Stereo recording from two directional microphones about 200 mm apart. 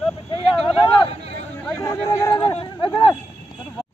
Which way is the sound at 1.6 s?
10° left (ahead or behind).